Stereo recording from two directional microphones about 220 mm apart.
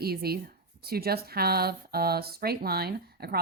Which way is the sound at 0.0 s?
45° right (ahead or behind).